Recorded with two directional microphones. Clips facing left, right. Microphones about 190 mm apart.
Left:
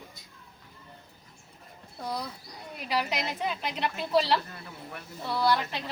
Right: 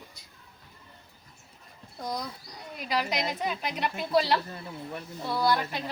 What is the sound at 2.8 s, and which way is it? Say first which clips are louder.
Speech: right 1 dB; 5° left (ahead or behind).